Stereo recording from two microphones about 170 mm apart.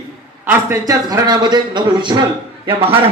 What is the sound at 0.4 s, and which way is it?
Speech, 15° right (ahead or behind).